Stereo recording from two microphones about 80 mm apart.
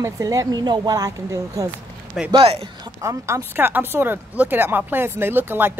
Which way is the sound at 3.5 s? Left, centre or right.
Right.